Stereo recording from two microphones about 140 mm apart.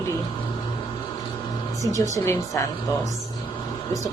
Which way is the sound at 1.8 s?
25° left (ahead or behind).